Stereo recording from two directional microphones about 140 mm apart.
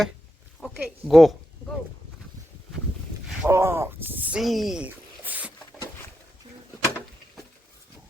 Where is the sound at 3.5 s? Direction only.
20° right (ahead or behind).